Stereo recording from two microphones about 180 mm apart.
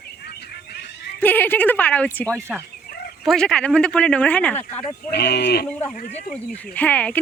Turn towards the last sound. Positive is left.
turn(degrees=10)  # may be behind; listen again after turning